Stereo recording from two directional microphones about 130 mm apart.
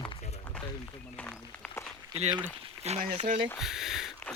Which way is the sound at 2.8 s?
60° right (ahead or behind).